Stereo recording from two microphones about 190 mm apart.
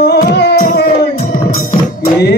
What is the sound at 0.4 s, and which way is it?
Music, 60° left (ahead or behind).